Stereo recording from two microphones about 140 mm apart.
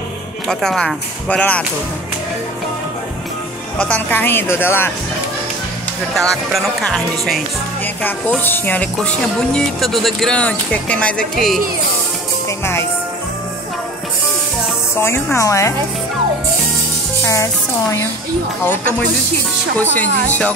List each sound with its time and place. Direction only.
0.5 s speech: 5° left (ahead or behind)
3.7 s speech: 10° left (ahead or behind)
6.1 s speech: centre (ahead or behind)
7.8 s speech: 15° left (ahead or behind)
12.4 s music: 20° left (ahead or behind)
15.0 s speech: 15° left (ahead or behind)
17.2 s a woman's voice: 20° left (ahead or behind)
18.7 s speech: 10° left (ahead or behind)